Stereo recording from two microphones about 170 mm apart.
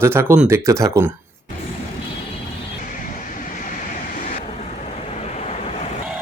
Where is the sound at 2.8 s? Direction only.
50° left (ahead or behind).